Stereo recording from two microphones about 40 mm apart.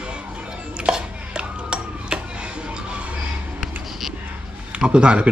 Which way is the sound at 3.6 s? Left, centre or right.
Centre.